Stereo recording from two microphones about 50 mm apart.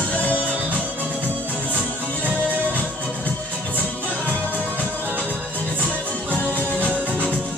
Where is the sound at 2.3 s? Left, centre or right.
Right.